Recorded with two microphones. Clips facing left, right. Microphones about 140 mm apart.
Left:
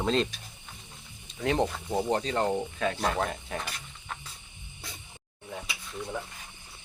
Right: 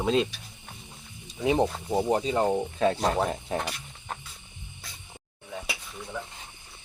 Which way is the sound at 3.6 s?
45° right (ahead or behind).